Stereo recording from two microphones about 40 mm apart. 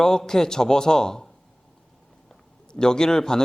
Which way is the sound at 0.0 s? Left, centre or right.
Centre.